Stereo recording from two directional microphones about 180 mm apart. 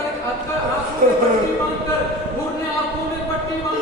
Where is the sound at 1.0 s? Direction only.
50° right (ahead or behind).